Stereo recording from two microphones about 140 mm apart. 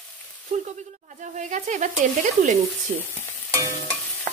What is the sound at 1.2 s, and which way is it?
A woman's voice, 60° right (ahead or behind).